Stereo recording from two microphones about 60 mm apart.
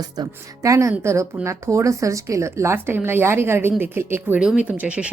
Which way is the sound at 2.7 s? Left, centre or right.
Right.